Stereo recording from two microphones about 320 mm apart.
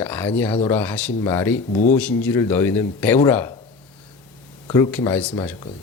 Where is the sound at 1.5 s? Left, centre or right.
Left.